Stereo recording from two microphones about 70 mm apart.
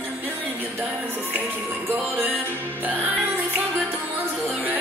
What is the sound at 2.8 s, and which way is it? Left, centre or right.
Music, right.